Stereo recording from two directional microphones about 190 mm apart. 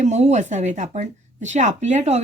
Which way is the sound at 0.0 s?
35° right (ahead or behind).